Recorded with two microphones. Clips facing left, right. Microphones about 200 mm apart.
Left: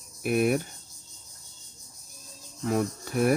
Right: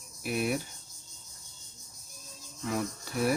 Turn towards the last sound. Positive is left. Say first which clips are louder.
# left 5 dB
turn(degrees=50)  # may be behind; listen again after turning